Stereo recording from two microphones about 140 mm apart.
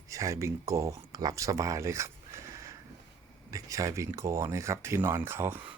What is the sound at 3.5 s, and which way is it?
Speech, 25° right (ahead or behind).